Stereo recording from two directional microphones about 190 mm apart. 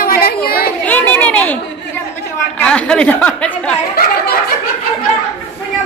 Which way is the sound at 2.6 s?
5° left (ahead or behind).